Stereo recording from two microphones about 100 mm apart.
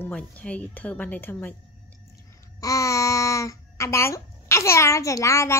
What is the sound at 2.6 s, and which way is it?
A child's voice, 35° left (ahead or behind).